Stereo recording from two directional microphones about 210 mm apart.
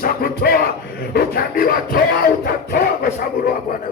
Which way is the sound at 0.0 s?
45° left (ahead or behind).